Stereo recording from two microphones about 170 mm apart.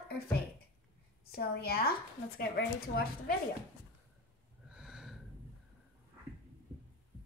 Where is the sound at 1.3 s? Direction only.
65° left (ahead or behind).